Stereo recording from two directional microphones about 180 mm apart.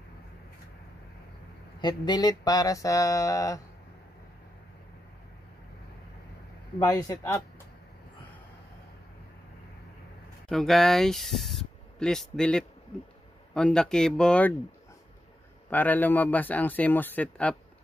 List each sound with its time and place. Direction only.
1.8 s mantra: 25° left (ahead or behind)
6.8 s mantra: 20° left (ahead or behind)
10.5 s speech: centre (ahead or behind)
15.7 s a man's voice: 10° left (ahead or behind)